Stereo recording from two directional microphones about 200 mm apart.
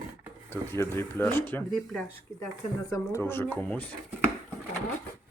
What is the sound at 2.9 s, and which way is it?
Speech, 15° left (ahead or behind).